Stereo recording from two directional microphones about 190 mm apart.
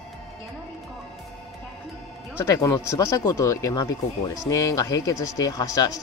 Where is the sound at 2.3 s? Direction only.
10° left (ahead or behind).